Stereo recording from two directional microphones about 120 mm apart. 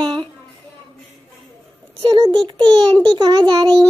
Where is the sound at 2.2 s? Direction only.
40° right (ahead or behind).